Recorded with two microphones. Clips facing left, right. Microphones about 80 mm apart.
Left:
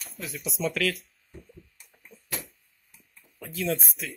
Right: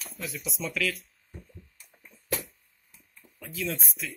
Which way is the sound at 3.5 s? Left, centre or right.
Left.